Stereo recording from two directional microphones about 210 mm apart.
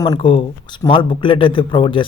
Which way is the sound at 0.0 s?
20° left (ahead or behind).